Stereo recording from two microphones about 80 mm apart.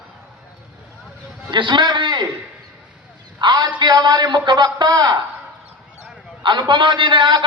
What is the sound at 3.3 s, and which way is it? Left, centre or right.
A man's voice, right.